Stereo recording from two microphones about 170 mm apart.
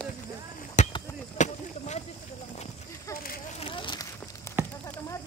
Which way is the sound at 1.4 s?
45° left (ahead or behind).